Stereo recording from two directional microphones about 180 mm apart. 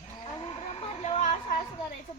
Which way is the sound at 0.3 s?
30° left (ahead or behind).